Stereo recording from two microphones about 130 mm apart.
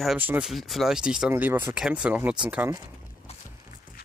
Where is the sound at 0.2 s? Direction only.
15° right (ahead or behind).